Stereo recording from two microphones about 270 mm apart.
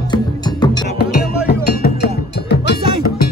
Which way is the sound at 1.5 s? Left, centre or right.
Left.